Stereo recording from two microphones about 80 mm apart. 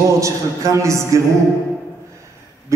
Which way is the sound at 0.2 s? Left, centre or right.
Right.